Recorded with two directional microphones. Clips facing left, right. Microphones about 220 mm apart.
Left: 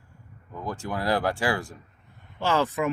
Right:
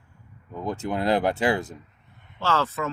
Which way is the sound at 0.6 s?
20° right (ahead or behind).